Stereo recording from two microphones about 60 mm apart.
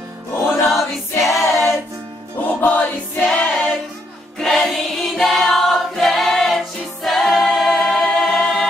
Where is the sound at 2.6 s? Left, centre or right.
Left.